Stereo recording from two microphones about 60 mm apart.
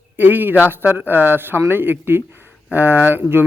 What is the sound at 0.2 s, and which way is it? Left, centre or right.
Speech, right.